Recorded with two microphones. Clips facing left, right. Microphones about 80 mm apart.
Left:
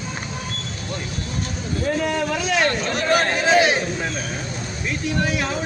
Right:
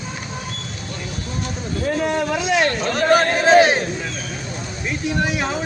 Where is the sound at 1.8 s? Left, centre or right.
Centre.